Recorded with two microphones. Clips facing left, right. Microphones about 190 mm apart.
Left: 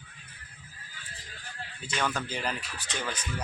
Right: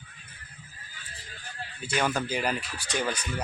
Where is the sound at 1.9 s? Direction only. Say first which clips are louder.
Right 4 dB; 10° right (ahead or behind).